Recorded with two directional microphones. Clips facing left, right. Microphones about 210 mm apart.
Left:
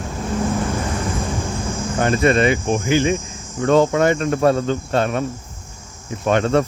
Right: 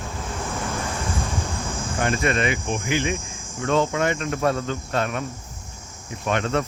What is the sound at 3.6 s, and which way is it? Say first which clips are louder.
Cricket: left 7 dB; 45° left (ahead or behind).